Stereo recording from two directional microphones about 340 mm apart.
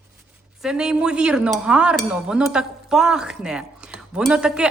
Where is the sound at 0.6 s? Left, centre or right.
Centre.